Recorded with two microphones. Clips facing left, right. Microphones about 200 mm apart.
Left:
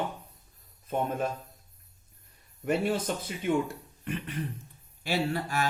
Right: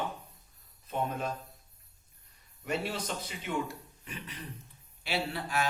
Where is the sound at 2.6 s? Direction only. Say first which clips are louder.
Left 7 dB; 50° left (ahead or behind).